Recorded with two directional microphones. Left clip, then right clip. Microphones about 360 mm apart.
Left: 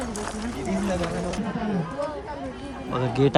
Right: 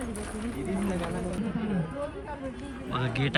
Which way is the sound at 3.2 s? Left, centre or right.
Left.